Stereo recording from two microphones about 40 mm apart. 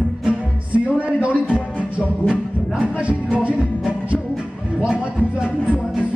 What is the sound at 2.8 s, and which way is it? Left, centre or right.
Music, right.